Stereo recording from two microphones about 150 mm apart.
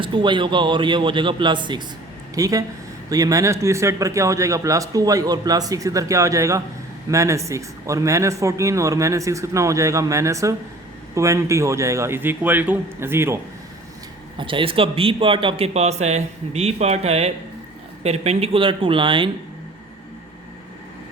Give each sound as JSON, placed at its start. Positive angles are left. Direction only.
{"t": 0.0, "sound": "a man's voice", "side_deg": -35}
{"t": 14.3, "sound": "a man's voice", "side_deg": -35}